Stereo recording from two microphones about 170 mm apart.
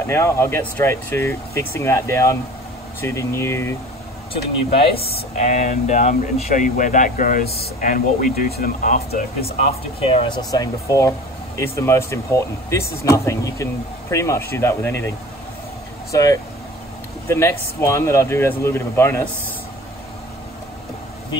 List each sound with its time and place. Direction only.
0.0 s speech: 15° left (ahead or behind)
4.3 s speech: 35° left (ahead or behind); by 9.2 s 60° left (ahead or behind)
9.4 s speech: 35° left (ahead or behind); by 19.2 s 15° left (ahead or behind)